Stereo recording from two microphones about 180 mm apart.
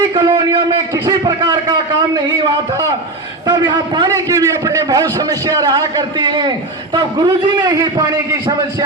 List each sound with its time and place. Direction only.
0.1 s a man's voice: 25° right (ahead or behind)
3.4 s a man's voice: 20° right (ahead or behind)